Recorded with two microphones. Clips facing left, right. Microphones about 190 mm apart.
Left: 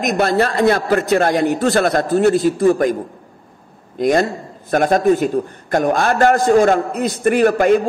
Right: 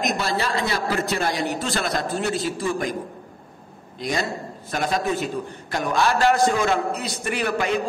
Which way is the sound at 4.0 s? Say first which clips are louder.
Left 10 dB; 50° left (ahead or behind).